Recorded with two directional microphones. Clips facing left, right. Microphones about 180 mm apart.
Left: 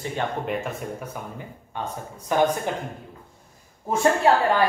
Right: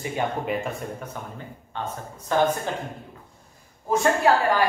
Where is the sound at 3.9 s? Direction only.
25° left (ahead or behind).